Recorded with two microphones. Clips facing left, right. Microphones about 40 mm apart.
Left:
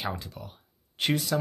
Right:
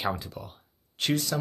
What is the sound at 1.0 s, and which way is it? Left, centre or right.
Speech, centre.